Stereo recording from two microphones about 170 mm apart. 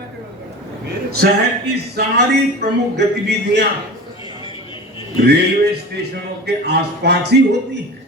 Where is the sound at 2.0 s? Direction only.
60° right (ahead or behind).